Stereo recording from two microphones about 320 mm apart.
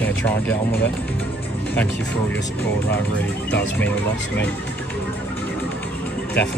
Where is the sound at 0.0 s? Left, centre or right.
Centre.